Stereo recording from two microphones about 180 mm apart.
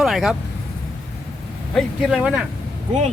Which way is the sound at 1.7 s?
Centre (ahead or behind).